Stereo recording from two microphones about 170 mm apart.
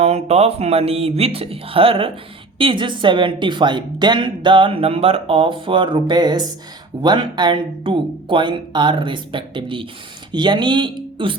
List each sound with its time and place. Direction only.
0.0 s speech: 40° right (ahead or behind)